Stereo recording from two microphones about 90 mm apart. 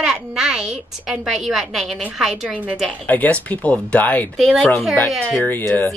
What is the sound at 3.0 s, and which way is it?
Speech, 20° left (ahead or behind).